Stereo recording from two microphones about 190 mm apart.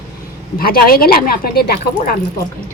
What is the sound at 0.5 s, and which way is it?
Speech, 50° left (ahead or behind).